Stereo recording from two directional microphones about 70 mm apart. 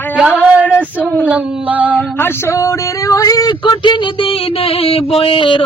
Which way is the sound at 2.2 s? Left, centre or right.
Left.